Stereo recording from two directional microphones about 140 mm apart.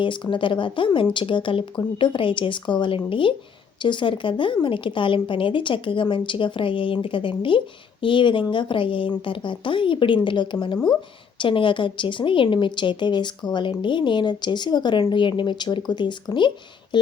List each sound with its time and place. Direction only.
0.0 s speech: 35° left (ahead or behind)